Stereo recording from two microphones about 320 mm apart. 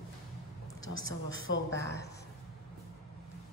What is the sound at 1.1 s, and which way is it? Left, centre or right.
Speech, left.